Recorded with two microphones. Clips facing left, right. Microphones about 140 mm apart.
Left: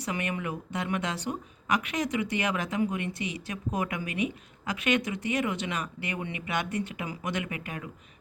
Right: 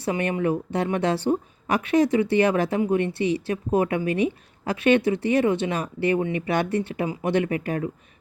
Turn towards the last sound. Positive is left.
turn(degrees=-35)  # may be behind; listen again after turning